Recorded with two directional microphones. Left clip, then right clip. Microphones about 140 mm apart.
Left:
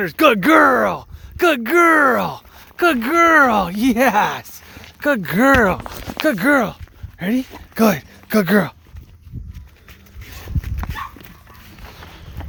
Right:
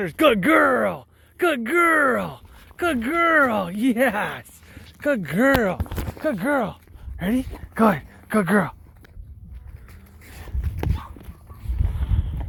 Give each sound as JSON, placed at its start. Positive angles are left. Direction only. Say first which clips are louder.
{"t": 0.0, "sound": "speech", "louder": "left 4 dB", "side_deg": 30}
{"t": 4.9, "sound": "speech", "louder": "left 4 dB", "side_deg": 60}
{"t": 6.3, "sound": "speech", "louder": "left 7 dB", "side_deg": 90}
{"t": 7.2, "sound": "speech", "louder": "left 3 dB", "side_deg": 20}
{"t": 7.7, "sound": "speech", "louder": "left 2 dB", "side_deg": 50}
{"t": 11.9, "sound": "run", "louder": "even", "side_deg": 45}